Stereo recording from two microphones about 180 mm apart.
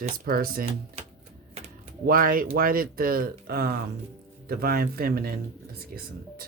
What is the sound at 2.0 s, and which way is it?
Speech, 55° right (ahead or behind).